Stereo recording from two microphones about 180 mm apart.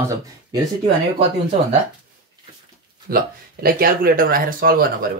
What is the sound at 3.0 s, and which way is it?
Speech, 55° right (ahead or behind).